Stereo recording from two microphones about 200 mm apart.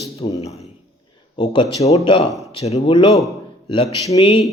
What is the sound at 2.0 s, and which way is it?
A man's voice, 30° left (ahead or behind).